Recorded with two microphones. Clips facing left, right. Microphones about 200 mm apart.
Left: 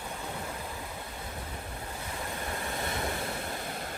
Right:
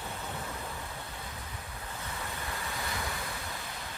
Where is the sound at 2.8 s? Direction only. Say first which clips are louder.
Left 6 dB; 25° left (ahead or behind).